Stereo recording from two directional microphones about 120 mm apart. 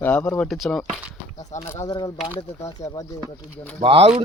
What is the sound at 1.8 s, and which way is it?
Speech, 35° left (ahead or behind).